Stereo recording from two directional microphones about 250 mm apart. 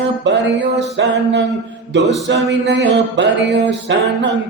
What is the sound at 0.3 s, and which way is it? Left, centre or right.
Music, right.